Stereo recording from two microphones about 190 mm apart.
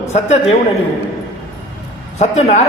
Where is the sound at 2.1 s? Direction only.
35° left (ahead or behind).